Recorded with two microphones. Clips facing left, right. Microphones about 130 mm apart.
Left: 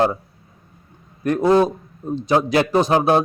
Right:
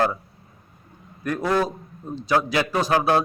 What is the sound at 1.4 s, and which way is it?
A man's voice, 25° left (ahead or behind).